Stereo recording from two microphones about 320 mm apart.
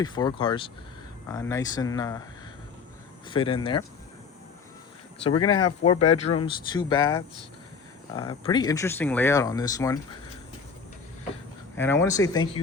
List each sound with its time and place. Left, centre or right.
0.0 s speech: centre
3.2 s speech: centre
5.2 s speech: centre
8.1 s speech: centre
11.8 s speech: centre